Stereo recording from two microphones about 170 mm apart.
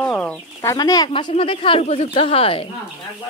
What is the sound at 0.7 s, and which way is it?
Speech, 20° left (ahead or behind).